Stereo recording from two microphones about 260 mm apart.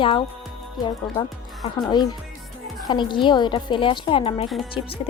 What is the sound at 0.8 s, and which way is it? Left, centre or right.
Speech, centre.